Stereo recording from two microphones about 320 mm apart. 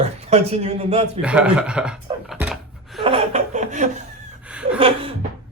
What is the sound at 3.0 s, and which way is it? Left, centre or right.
Laughter, centre.